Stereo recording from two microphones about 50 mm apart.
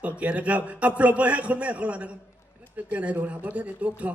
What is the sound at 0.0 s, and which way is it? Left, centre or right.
A man's voice, right.